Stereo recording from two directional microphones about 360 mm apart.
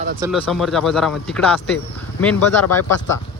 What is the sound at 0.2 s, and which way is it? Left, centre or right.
Speech, centre.